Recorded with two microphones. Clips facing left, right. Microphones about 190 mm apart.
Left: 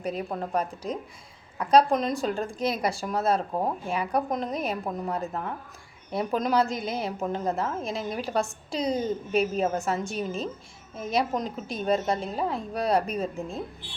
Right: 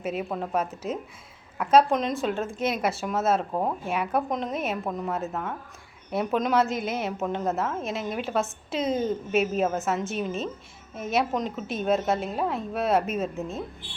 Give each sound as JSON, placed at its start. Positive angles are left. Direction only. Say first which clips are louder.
{"t": 0.0, "sound": "a woman's voice", "louder": "right 1 dB", "side_deg": -5}